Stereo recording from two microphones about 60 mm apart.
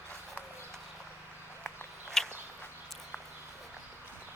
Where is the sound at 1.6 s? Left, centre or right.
Centre.